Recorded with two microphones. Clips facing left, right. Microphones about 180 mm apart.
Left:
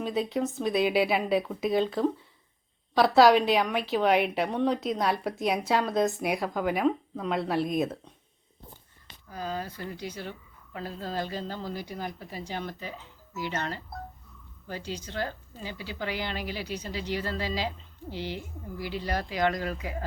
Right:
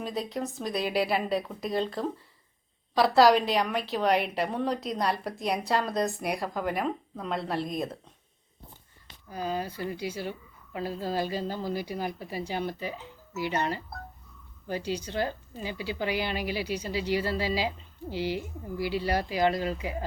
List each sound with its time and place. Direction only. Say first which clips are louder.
0.0 s a woman's voice: left 4 dB; centre (ahead or behind)
9.3 s a woman's voice: right 2 dB; 15° right (ahead or behind)
19.4 s speech: even; 30° right (ahead or behind)